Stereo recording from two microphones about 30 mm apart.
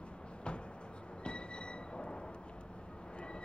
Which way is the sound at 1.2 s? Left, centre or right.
Left.